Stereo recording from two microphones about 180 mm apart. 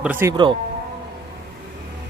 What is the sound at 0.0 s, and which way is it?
Speech, 10° right (ahead or behind).